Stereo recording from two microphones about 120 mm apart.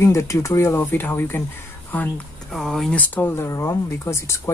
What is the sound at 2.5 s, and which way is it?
Speech, centre (ahead or behind).